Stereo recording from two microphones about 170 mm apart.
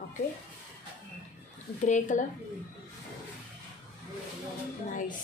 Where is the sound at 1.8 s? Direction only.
45° left (ahead or behind).